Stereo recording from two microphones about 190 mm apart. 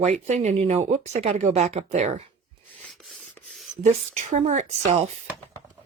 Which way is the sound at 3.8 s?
35° right (ahead or behind).